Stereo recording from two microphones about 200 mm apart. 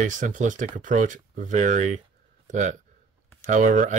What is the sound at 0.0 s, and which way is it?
Speech, 40° right (ahead or behind).